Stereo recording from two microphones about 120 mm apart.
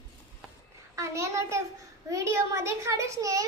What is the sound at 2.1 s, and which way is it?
A child's voice, 25° right (ahead or behind).